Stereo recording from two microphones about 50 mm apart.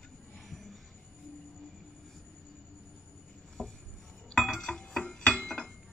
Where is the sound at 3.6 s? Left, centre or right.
Centre.